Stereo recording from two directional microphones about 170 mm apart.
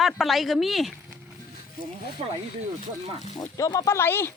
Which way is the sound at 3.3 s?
25° left (ahead or behind).